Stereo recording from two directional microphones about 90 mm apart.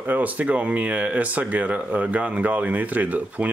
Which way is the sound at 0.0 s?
20° right (ahead or behind).